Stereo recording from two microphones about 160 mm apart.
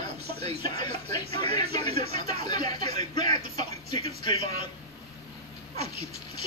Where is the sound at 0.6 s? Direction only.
25° left (ahead or behind).